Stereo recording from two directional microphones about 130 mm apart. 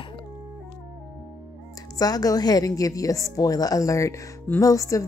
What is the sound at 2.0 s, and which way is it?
A woman's voice, 30° left (ahead or behind).